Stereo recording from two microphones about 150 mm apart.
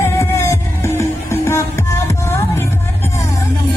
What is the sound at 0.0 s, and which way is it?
Music, 20° left (ahead or behind).